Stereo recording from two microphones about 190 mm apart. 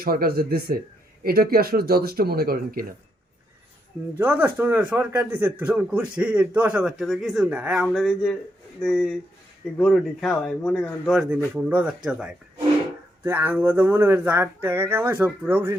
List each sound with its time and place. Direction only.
0.0 s speech: 50° right (ahead or behind)
4.2 s a man's voice: 10° right (ahead or behind)